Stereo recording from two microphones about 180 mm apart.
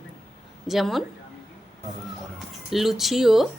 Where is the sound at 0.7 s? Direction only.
Centre (ahead or behind).